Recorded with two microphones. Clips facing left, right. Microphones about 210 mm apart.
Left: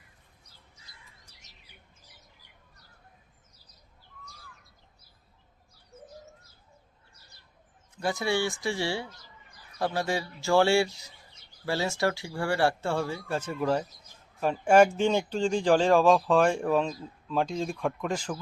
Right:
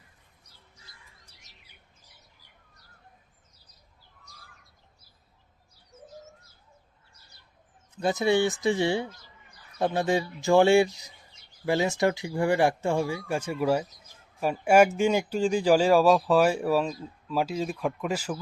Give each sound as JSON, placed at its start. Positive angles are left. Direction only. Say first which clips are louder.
{"t": 7.9, "sound": "a man's voice", "louder": "right 5 dB", "side_deg": -20}